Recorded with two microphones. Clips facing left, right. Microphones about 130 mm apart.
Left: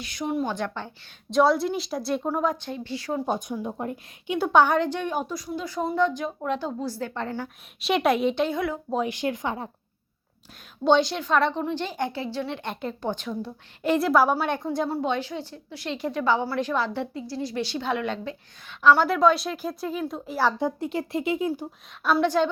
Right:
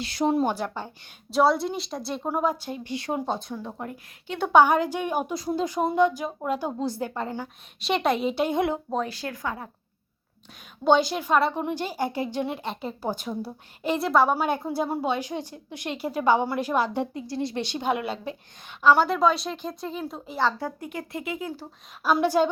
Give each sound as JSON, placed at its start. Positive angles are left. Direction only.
{"t": 0.0, "sound": "speech", "side_deg": -30}
{"t": 0.5, "sound": "speech", "side_deg": -10}
{"t": 2.6, "sound": "speech", "side_deg": -20}
{"t": 3.2, "sound": "speech", "side_deg": 10}
{"t": 4.3, "sound": "speech", "side_deg": 0}
{"t": 5.3, "sound": "speech", "side_deg": -30}
{"t": 5.6, "sound": "speech", "side_deg": -20}
{"t": 7.4, "sound": "speech", "side_deg": 0}
{"t": 8.4, "sound": "speech", "side_deg": -20}
{"t": 9.0, "sound": "speech", "side_deg": 20}
{"t": 10.8, "sound": "speech", "side_deg": -5}
{"t": 20.5, "sound": "speech", "side_deg": 20}
{"t": 22.0, "sound": "speech", "side_deg": -10}